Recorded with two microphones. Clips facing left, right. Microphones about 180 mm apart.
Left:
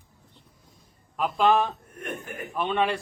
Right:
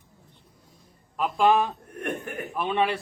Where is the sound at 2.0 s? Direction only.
60° right (ahead or behind).